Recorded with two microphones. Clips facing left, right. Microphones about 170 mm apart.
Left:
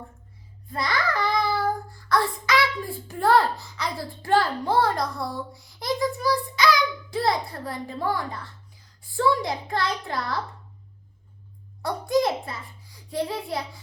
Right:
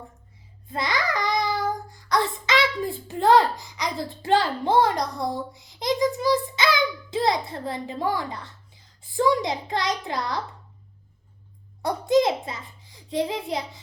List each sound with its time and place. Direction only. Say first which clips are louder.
0.7 s a child's voice: even; 20° right (ahead or behind)
11.8 s a child's voice: right 3 dB; 20° right (ahead or behind)